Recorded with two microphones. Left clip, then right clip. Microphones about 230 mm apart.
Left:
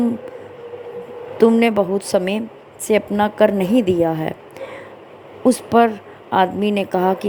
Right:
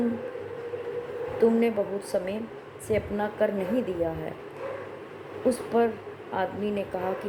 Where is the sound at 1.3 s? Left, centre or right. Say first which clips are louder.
Left 9 dB; left.